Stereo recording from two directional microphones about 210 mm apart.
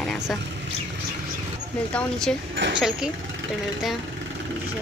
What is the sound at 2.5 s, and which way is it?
Speech, 60° right (ahead or behind).